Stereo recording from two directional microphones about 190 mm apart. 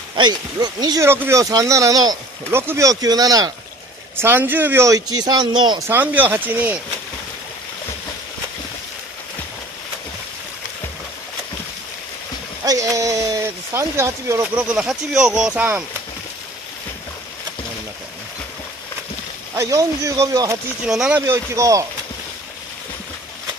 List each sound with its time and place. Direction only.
0.1 s speech: 20° right (ahead or behind)
5.9 s speech: 10° right (ahead or behind)
12.6 s speech: 15° right (ahead or behind)
19.5 s speech: 15° right (ahead or behind)
20.8 s speech: 5° right (ahead or behind)